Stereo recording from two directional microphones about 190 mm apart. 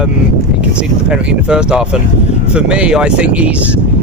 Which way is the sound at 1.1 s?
5° right (ahead or behind).